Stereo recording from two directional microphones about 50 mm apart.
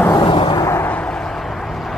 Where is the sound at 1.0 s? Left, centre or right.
Centre.